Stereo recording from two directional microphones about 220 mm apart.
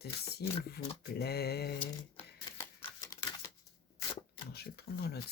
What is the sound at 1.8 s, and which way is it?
Typewriter, 25° left (ahead or behind).